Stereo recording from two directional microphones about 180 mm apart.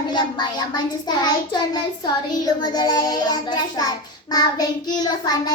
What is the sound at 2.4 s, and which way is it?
Child singing, 25° left (ahead or behind).